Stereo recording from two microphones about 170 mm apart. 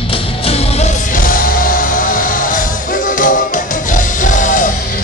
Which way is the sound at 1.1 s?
55° left (ahead or behind).